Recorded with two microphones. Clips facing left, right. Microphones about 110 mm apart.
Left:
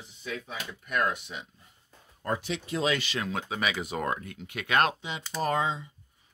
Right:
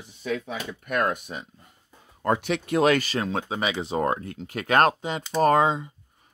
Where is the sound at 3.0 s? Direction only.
35° right (ahead or behind); by 5.9 s 50° right (ahead or behind).